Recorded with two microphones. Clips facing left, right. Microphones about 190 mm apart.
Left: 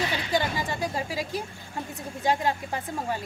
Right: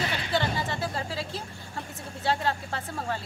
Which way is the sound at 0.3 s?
15° left (ahead or behind).